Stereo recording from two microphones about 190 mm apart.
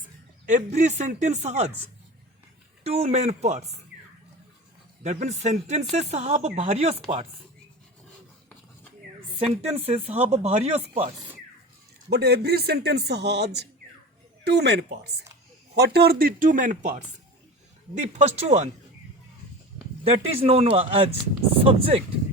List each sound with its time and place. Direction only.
0.0 s speech: 40° right (ahead or behind)
2.8 s speech: 35° right (ahead or behind)
5.0 s speech: 40° right (ahead or behind)
9.3 s speech: 30° right (ahead or behind)
12.1 s a man's voice: 60° right (ahead or behind); by 18.7 s 35° right (ahead or behind)
20.1 s speech: 30° right (ahead or behind)